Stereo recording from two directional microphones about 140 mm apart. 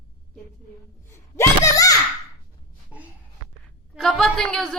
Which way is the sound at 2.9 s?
10° right (ahead or behind).